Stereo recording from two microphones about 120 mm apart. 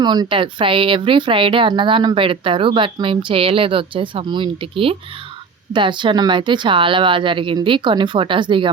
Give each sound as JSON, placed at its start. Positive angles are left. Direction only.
{"t": 0.0, "sound": "speech", "side_deg": -35}